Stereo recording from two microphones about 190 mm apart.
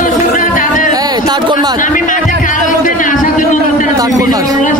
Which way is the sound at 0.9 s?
20° right (ahead or behind).